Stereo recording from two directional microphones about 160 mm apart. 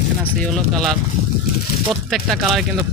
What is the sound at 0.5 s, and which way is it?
Speech, centre (ahead or behind).